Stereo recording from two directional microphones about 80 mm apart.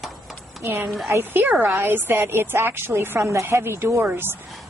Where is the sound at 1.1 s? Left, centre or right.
Right.